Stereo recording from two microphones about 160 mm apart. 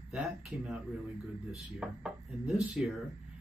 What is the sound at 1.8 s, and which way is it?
Speech, 5° right (ahead or behind).